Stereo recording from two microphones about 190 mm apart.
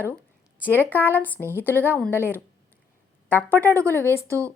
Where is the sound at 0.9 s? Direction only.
10° left (ahead or behind).